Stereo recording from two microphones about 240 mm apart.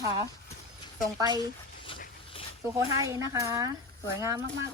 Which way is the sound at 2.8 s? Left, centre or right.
Centre.